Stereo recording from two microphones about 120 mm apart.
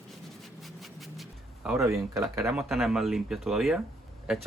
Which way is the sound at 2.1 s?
25° right (ahead or behind).